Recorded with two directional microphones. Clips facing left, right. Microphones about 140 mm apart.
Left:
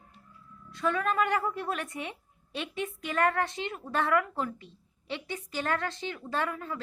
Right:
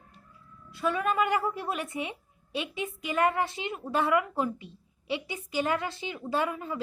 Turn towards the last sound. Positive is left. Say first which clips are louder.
# right 3 dB
turn(degrees=-15)  # may be behind; listen again after turning